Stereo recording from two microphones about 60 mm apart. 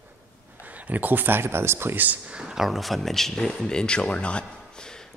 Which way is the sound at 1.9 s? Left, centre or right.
Right.